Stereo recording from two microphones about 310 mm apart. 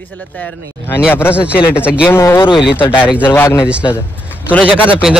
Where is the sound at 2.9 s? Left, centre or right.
Centre.